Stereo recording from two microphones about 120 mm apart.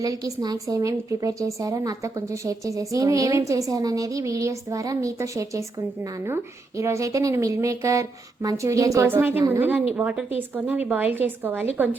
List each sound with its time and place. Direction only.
0.0 s a woman's voice: 30° right (ahead or behind)